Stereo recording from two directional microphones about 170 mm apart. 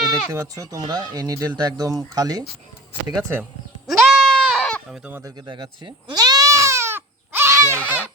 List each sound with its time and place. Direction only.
0.3 s speech: 20° right (ahead or behind)
3.8 s goat: centre (ahead or behind)
5.2 s goat: 25° right (ahead or behind); by 8.0 s 10° right (ahead or behind)